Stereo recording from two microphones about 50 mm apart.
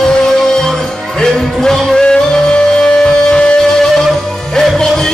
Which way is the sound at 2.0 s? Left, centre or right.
Left.